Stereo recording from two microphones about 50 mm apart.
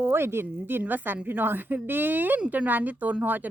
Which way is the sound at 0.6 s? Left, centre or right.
Right.